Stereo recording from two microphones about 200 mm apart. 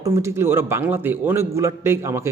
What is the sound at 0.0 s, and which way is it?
A man's voice, 15° right (ahead or behind).